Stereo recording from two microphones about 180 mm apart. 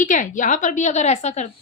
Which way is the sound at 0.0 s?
45° left (ahead or behind).